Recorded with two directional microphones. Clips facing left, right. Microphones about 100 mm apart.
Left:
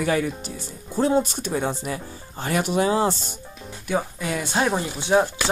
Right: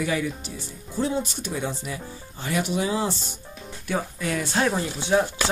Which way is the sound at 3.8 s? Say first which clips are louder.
Left 2 dB; 10° left (ahead or behind).